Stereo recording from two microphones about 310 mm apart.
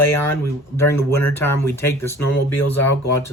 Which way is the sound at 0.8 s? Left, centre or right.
Centre.